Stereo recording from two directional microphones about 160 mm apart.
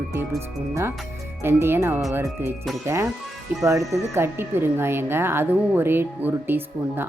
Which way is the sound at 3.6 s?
20° right (ahead or behind).